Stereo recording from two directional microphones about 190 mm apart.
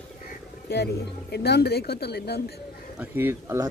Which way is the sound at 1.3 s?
60° left (ahead or behind).